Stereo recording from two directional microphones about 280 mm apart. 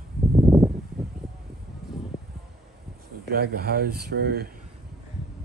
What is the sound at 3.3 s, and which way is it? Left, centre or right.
Speech, right.